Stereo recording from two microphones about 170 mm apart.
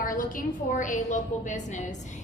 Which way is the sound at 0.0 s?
55° left (ahead or behind).